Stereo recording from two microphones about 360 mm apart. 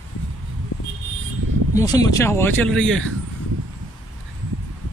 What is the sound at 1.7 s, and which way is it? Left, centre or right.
Speech, centre.